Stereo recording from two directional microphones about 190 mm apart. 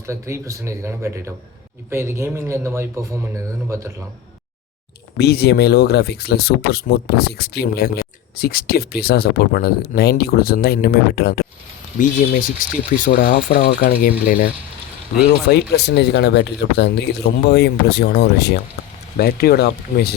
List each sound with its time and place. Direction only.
0.0 s speech: 15° right (ahead or behind)
5.1 s speech: 60° left (ahead or behind)
11.9 s speech: 45° left (ahead or behind)
15.7 s speech: 60° left (ahead or behind)